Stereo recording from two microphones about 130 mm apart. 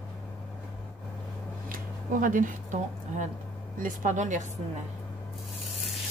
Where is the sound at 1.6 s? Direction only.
90° right.